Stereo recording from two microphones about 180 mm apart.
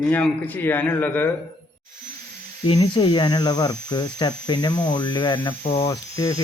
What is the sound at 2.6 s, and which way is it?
Speech, 25° left (ahead or behind).